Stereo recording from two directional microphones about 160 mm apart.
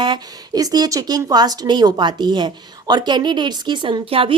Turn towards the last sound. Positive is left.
turn(degrees=-35)  # may be behind; listen again after turning